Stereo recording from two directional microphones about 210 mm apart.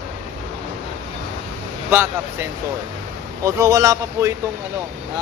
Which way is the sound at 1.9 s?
10° right (ahead or behind).